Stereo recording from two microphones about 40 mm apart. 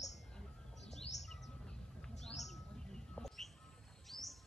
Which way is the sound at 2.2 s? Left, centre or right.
Centre.